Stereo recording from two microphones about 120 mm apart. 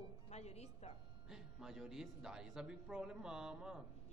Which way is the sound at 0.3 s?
65° left (ahead or behind).